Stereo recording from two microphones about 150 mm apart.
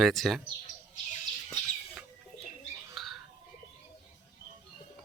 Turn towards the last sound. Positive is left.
turn(degrees=0)  # may be behind; listen again after turning